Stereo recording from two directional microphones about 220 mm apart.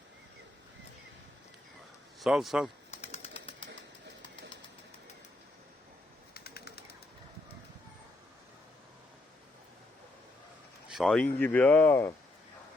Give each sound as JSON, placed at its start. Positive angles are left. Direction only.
{"t": 2.2, "sound": "a man's voice", "side_deg": 0}
{"t": 2.9, "sound": "bird", "side_deg": 30}
{"t": 6.3, "sound": "a sound", "side_deg": 45}
{"t": 10.8, "sound": "speech", "side_deg": 0}